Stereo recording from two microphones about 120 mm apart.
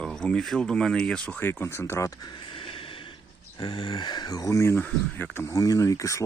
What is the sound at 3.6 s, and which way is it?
Speech, 45° left (ahead or behind).